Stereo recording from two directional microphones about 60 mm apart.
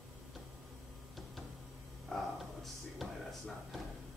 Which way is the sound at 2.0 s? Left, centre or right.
Centre.